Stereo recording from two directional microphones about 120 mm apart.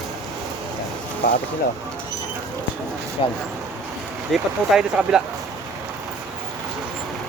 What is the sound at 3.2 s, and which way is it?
Speech, 45° left (ahead or behind).